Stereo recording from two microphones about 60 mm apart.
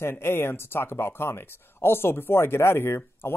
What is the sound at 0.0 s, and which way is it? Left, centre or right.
Speech, left.